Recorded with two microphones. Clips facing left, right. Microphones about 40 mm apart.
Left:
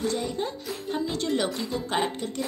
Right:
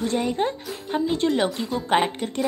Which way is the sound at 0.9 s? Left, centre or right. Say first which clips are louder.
Right 5 dB; right.